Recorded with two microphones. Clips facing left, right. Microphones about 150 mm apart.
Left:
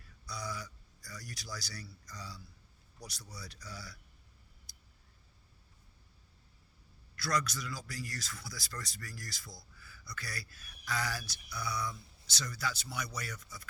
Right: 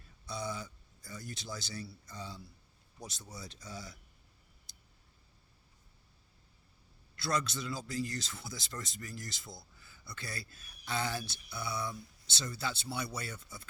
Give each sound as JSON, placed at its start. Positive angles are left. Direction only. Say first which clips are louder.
{"t": 0.0, "sound": "speech", "louder": "right 4 dB", "side_deg": -25}
{"t": 4.7, "sound": "a sound", "louder": "even", "side_deg": -25}
{"t": 7.2, "sound": "speech", "louder": "even", "side_deg": -25}